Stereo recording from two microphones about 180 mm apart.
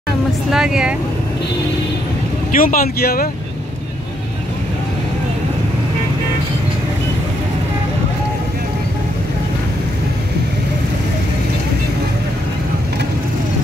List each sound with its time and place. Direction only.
0.5 s speech: 5° right (ahead or behind)
2.5 s speech: 50° left (ahead or behind)